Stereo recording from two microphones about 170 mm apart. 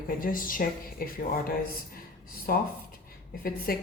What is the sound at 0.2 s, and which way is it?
A woman's voice, 55° left (ahead or behind).